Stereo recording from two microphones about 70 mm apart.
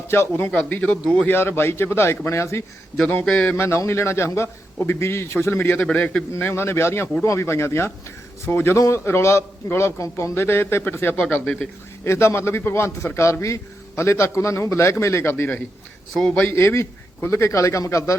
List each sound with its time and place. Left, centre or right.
0.1 s a man's voice: left; by 1.3 s centre
1.3 s a man's voice: left
5.8 s a man's voice: centre
6.5 s a man's voice: left
8.7 s a man's voice: left
12.0 s a man's voice: left
16.2 s a man's voice: centre
16.5 s a man's voice: left